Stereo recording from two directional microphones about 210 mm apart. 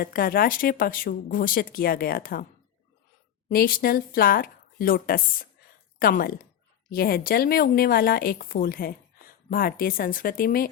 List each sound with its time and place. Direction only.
0.0 s speech: 45° left (ahead or behind)
3.5 s speech: 45° left (ahead or behind)